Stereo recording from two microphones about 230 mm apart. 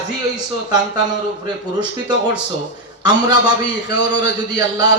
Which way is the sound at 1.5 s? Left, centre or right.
Centre.